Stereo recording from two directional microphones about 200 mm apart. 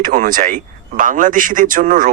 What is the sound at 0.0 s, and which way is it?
Speech, 40° right (ahead or behind).